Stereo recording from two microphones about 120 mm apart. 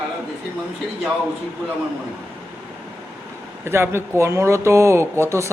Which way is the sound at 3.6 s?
20° right (ahead or behind).